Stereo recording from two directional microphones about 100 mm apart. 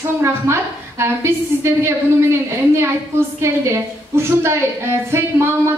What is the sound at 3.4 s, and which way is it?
A woman's voice, 25° right (ahead or behind).